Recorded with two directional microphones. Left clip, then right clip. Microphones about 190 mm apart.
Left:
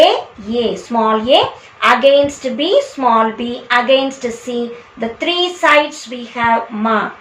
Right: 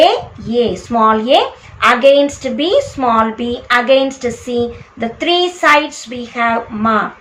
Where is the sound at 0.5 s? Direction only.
15° right (ahead or behind).